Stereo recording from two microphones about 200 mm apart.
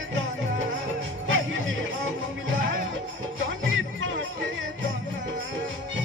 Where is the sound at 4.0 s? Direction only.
70° right (ahead or behind).